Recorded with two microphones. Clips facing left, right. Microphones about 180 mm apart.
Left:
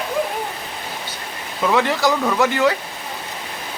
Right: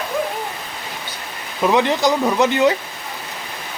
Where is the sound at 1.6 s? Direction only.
20° right (ahead or behind).